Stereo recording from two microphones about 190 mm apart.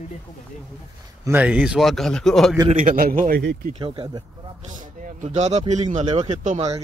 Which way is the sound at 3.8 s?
25° right (ahead or behind).